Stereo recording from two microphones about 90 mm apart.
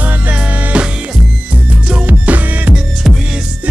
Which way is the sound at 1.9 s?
15° right (ahead or behind).